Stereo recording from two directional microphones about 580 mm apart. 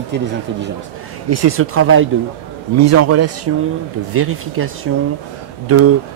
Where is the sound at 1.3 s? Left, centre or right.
Right.